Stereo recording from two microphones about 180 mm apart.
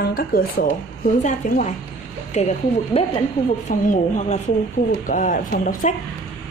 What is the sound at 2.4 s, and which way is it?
Speech, 40° left (ahead or behind).